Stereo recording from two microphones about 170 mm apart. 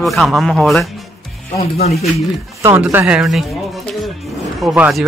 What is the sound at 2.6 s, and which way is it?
Speech, 15° right (ahead or behind).